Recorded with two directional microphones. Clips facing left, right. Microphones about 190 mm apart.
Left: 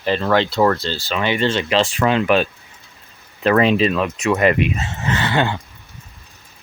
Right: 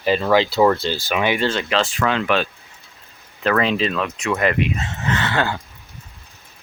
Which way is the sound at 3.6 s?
15° left (ahead or behind).